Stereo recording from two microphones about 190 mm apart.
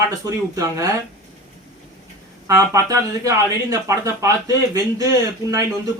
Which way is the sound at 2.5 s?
15° right (ahead or behind).